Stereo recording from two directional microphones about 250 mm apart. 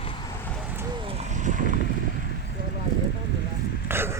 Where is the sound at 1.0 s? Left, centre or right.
Right.